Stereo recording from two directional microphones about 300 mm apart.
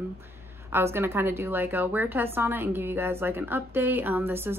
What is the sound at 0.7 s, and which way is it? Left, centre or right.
A woman's voice, centre.